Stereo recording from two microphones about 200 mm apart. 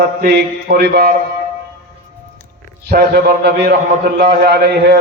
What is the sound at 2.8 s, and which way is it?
A man's voice, 55° right (ahead or behind).